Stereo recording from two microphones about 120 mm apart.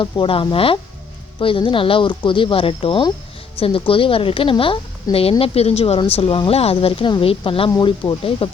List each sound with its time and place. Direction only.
0.0 s speech: 45° left (ahead or behind)
5.1 s a woman's voice: 30° left (ahead or behind)
5.4 s a woman's voice: 55° left (ahead or behind)